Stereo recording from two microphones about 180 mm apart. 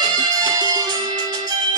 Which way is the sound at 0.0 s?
20° right (ahead or behind).